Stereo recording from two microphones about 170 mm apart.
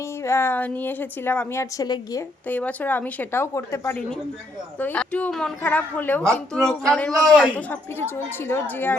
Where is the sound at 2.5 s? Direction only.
10° left (ahead or behind).